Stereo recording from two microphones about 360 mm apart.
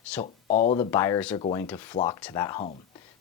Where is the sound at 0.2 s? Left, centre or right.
Centre.